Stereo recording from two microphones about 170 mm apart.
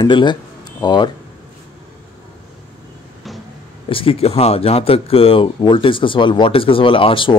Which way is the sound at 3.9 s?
30° left (ahead or behind).